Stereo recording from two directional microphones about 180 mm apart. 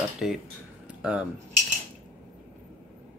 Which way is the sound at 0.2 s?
Centre (ahead or behind).